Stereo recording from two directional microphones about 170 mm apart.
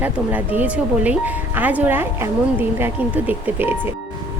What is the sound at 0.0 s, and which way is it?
Speech, 10° right (ahead or behind).